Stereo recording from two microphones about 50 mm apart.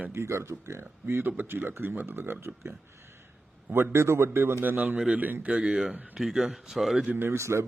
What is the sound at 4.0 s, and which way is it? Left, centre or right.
Speech, right.